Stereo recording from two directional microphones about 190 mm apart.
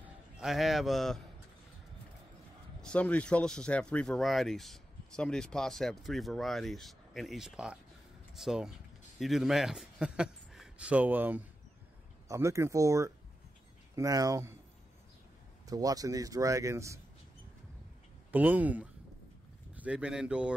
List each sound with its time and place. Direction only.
0.0 s a man's voice: 5° right (ahead or behind)
2.8 s a man's voice: 5° left (ahead or behind); by 14.6 s 15° right (ahead or behind)
15.6 s speech: 20° right (ahead or behind)
18.3 s speech: 10° right (ahead or behind)